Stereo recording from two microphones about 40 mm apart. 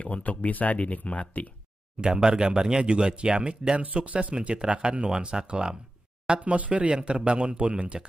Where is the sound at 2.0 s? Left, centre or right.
Right.